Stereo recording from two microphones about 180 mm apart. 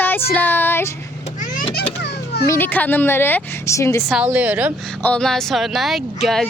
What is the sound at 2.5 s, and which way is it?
A woman's voice, 10° left (ahead or behind).